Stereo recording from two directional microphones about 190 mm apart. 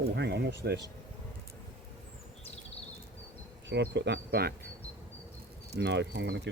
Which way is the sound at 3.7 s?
65° right (ahead or behind).